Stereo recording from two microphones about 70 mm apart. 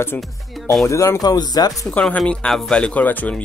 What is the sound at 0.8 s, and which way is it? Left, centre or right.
Speech, left.